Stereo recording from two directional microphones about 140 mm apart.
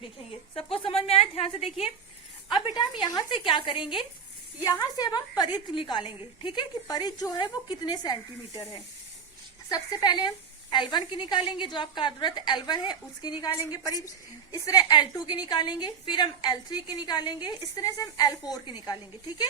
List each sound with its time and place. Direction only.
0.5 s a woman's voice: 40° left (ahead or behind)
2.5 s a woman's voice: 35° left (ahead or behind)